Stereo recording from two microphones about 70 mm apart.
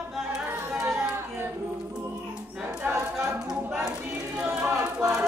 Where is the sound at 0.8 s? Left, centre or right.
Right.